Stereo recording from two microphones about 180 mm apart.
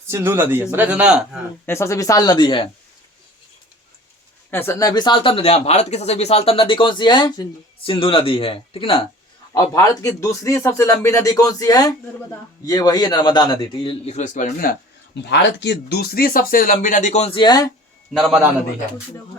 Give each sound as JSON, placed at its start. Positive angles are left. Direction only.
{"t": 0.1, "sound": "a man's voice", "side_deg": -15}
{"t": 1.6, "sound": "speech", "side_deg": 15}
{"t": 4.5, "sound": "speech", "side_deg": 15}
{"t": 9.5, "sound": "speech", "side_deg": 20}
{"t": 15.1, "sound": "speech", "side_deg": 75}
{"t": 18.1, "sound": "a man's voice", "side_deg": 0}